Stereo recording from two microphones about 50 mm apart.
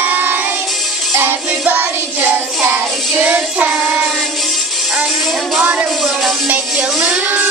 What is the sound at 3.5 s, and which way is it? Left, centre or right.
Child singing, right.